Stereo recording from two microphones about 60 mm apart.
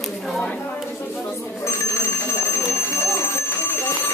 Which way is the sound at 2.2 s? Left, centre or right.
Left.